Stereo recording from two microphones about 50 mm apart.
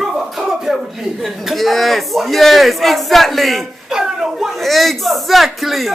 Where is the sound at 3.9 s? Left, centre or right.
Centre.